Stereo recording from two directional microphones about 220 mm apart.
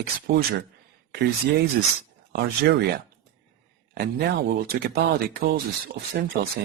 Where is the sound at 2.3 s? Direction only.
50° right (ahead or behind).